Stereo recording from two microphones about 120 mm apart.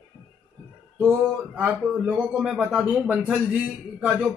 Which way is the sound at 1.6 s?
10° right (ahead or behind).